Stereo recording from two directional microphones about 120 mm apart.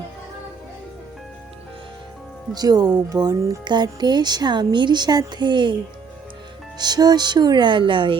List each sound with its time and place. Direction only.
2.6 s speech: 35° right (ahead or behind)
6.7 s speech: 35° right (ahead or behind)